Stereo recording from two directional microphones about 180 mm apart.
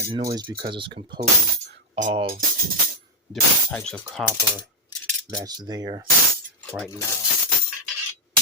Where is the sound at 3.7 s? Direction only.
10° left (ahead or behind).